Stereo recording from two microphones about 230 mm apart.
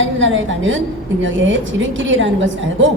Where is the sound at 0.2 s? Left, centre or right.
Right.